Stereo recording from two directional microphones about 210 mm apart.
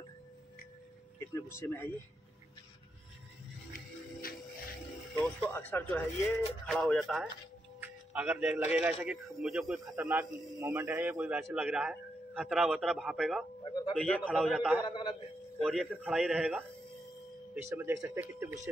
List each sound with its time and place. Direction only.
1.3 s a man's voice: 10° left (ahead or behind)
5.2 s a man's voice: 5° left (ahead or behind)
9.9 s a man's voice: 10° right (ahead or behind)
14.9 s a man's voice: 20° left (ahead or behind)
15.6 s a man's voice: centre (ahead or behind)
17.6 s speech: 10° right (ahead or behind)